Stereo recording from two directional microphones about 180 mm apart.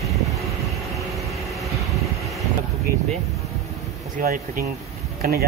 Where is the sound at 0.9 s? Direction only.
Centre (ahead or behind).